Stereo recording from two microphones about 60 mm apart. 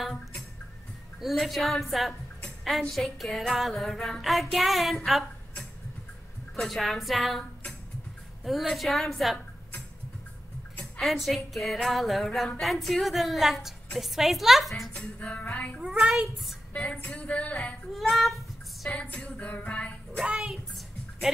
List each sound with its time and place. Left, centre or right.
1.2 s music: centre
4.2 s a woman's voice: centre
6.5 s music: centre
8.5 s music: centre
10.8 s music: centre
15.0 s music: left
15.8 s a child's voice: centre
16.7 s music: left
17.9 s music: centre
18.9 s music: left
20.2 s a child's voice: centre